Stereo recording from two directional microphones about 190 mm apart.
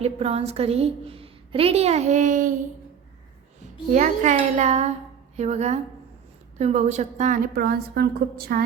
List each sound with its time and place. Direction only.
0.0 s a woman's voice: 30° right (ahead or behind)
3.9 s a woman's voice: 40° right (ahead or behind)